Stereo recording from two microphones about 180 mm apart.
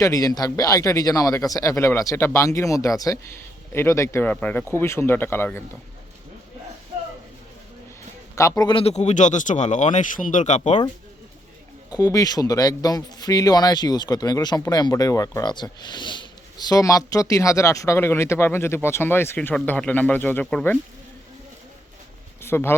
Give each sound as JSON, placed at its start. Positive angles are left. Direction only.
{"t": 0.0, "sound": "speech", "side_deg": 20}
{"t": 8.4, "sound": "a man's voice", "side_deg": 20}
{"t": 11.9, "sound": "a man's voice", "side_deg": 20}
{"t": 22.4, "sound": "a sound", "side_deg": 15}